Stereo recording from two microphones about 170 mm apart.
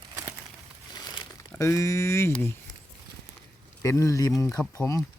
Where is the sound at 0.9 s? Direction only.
20° left (ahead or behind).